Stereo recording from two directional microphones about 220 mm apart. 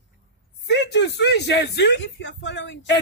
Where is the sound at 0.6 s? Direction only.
50° left (ahead or behind).